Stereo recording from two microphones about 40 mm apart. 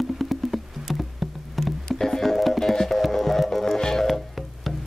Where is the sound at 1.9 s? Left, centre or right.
Centre.